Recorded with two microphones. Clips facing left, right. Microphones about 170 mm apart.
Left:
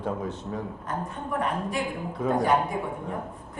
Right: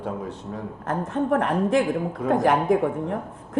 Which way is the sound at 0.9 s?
85° right.